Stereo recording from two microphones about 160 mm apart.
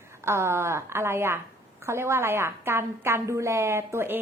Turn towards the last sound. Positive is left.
turn(degrees=-15)  # may be behind; listen again after turning